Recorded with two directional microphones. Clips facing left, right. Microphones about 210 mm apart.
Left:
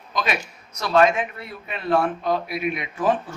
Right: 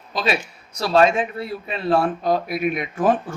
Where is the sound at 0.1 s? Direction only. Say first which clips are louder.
Right 3 dB; 30° right (ahead or behind).